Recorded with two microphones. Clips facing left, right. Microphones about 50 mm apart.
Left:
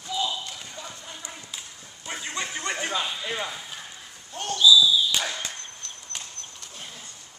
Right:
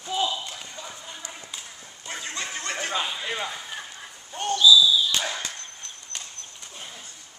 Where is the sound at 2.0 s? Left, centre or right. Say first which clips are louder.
Left 1 dB; centre.